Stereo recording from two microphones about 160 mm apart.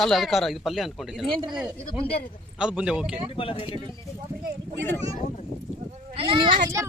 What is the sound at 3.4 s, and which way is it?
Speech, 35° left (ahead or behind).